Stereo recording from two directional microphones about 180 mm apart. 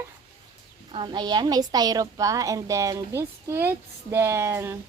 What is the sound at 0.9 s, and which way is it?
A woman's voice, 25° right (ahead or behind).